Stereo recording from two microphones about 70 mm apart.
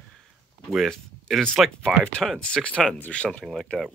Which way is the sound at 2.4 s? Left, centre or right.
Centre.